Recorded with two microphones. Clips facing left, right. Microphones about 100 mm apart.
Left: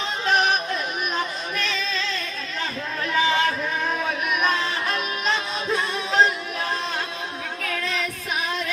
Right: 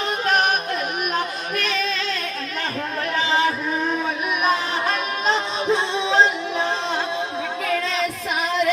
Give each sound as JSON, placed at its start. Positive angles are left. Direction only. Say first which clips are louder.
{"t": 1.1, "sound": "singing", "louder": "right 3 dB", "side_deg": -60}
{"t": 4.9, "sound": "music", "louder": "right 5 dB", "side_deg": -30}